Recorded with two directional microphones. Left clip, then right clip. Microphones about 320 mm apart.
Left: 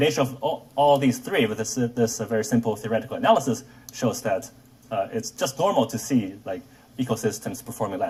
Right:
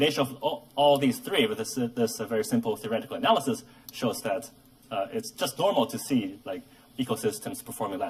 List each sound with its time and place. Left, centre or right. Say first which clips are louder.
0.2 s speech: left 3 dB; centre